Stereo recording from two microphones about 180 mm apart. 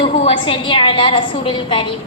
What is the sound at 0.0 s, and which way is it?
A woman's voice, 30° left (ahead or behind).